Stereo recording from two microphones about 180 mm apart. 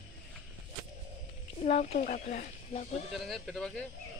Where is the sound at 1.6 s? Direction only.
35° left (ahead or behind).